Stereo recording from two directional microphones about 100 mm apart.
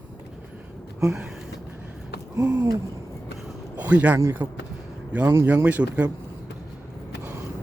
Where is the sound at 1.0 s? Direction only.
10° right (ahead or behind).